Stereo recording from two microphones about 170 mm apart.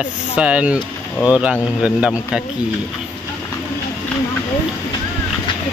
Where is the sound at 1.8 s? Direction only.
5° right (ahead or behind).